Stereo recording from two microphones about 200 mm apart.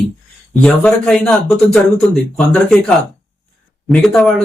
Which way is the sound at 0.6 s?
5° left (ahead or behind).